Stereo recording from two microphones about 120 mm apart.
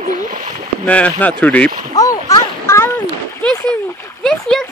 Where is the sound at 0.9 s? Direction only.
10° left (ahead or behind).